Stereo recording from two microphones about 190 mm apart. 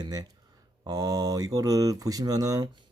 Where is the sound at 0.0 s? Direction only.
20° right (ahead or behind).